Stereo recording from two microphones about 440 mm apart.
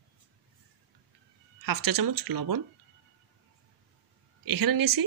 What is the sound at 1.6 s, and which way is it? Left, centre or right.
Speech, right.